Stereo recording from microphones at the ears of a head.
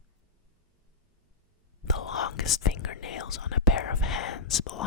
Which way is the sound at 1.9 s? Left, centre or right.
Left.